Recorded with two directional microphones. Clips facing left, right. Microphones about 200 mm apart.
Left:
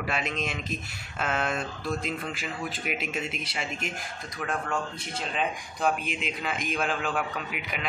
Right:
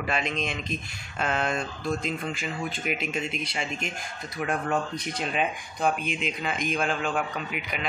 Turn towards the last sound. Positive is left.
turn(degrees=0)  # may be behind; listen again after turning